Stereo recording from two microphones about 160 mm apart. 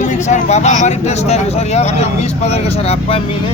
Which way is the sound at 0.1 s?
45° left (ahead or behind).